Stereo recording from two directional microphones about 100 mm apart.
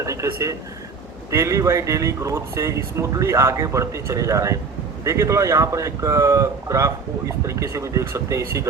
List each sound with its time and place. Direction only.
0.0 s speech: 30° right (ahead or behind)